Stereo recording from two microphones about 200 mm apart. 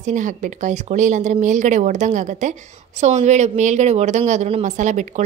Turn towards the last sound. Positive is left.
turn(degrees=-35)  # may be behind; listen again after turning